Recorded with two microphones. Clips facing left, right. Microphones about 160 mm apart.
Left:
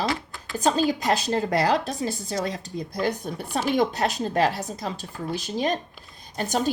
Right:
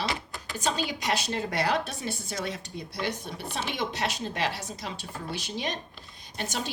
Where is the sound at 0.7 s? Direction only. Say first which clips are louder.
Left 7 dB; 45° left (ahead or behind).